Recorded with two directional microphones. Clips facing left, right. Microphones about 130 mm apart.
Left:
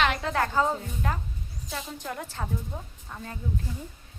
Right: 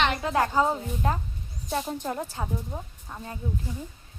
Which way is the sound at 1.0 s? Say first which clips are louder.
Right 5 dB; 25° right (ahead or behind).